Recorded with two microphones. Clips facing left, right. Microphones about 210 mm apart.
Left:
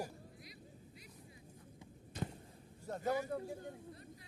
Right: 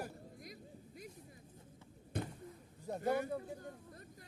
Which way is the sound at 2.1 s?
55° right (ahead or behind).